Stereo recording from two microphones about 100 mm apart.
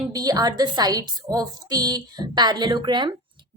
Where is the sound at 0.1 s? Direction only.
40° right (ahead or behind).